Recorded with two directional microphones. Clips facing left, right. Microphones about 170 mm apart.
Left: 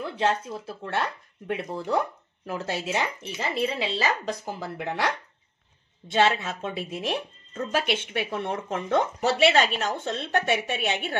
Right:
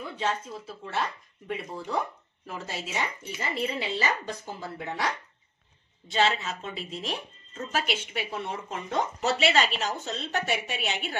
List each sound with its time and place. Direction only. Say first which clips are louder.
0.2 s speech: left 5 dB; 70° left (ahead or behind)
3.3 s a woman's voice: left 4 dB; 90° left; by 5.1 s 70° left (ahead or behind)
6.1 s speech: left 3 dB; 55° left (ahead or behind)